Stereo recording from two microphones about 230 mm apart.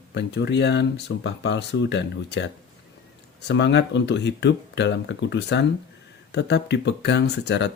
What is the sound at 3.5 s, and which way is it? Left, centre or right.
Speech, left.